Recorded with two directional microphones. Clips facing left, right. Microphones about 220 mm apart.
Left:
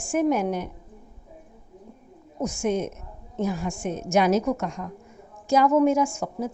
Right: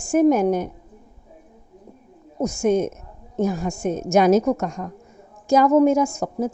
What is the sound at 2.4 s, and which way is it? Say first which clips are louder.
A woman's voice: right 6 dB; 40° right (ahead or behind).